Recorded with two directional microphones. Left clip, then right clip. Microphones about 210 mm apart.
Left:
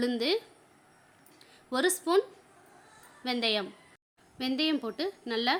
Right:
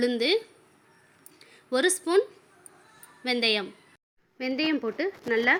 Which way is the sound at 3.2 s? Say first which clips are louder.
Right 4 dB; 5° right (ahead or behind).